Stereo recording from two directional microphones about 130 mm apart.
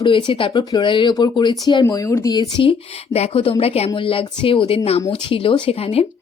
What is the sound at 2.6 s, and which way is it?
A woman's voice, 45° left (ahead or behind).